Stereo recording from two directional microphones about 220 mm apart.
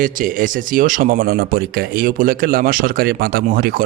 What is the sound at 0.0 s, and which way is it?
Speech, 40° right (ahead or behind).